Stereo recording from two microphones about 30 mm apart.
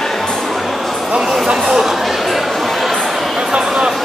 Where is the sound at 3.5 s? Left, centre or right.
Right.